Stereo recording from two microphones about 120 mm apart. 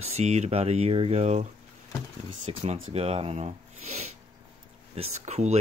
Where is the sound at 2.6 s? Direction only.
60° right (ahead or behind).